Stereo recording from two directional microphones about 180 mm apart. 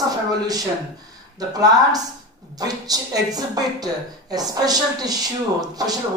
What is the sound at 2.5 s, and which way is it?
Speech, 20° right (ahead or behind).